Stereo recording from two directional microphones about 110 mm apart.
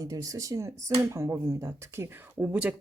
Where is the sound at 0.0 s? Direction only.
30° right (ahead or behind).